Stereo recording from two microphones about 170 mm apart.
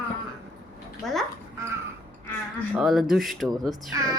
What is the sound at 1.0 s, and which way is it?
Speech, centre (ahead or behind).